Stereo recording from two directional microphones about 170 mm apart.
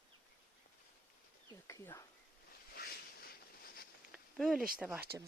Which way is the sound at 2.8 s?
65° left (ahead or behind).